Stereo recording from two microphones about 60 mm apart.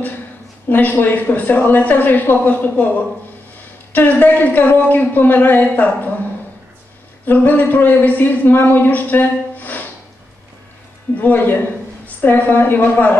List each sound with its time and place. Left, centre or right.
0.7 s speech: left
3.9 s speech: left
7.2 s speech: left
11.1 s speech: left